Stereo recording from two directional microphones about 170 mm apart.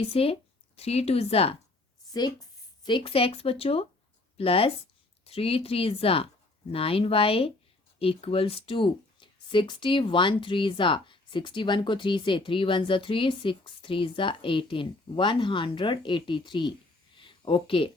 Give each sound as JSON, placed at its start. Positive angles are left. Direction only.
{"t": 0.0, "sound": "speech", "side_deg": 35}
{"t": 2.8, "sound": "speech", "side_deg": 30}
{"t": 17.2, "sound": "a sound", "side_deg": 30}